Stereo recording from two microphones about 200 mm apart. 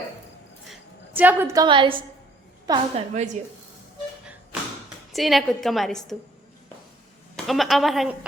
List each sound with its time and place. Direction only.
0.7 s a sound: 10° right (ahead or behind)
1.6 s a woman's voice: 25° right (ahead or behind)
5.1 s a woman's voice: centre (ahead or behind)
7.3 s a woman's voice: centre (ahead or behind)